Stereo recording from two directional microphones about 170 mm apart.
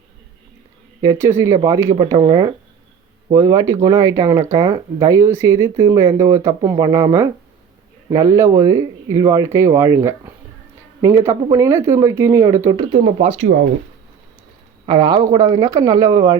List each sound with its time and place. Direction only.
1.0 s speech: 15° right (ahead or behind); by 13.4 s 35° right (ahead or behind)
14.8 s speech: 25° right (ahead or behind)